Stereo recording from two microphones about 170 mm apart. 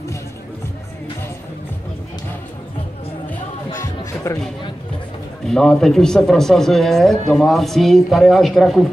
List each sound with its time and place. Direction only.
3.8 s music: 20° left (ahead or behind)
5.5 s speech: 5° left (ahead or behind)